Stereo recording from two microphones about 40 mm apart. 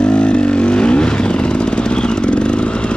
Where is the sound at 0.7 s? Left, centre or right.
Left.